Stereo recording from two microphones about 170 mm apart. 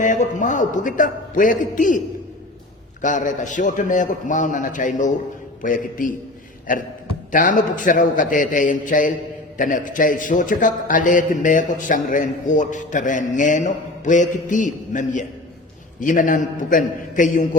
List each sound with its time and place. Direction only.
0.0 s a man's voice: 45° left (ahead or behind)
3.0 s a man's voice: 50° left (ahead or behind)